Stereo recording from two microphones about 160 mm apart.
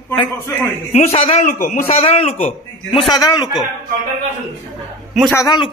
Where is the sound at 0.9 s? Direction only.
40° left (ahead or behind).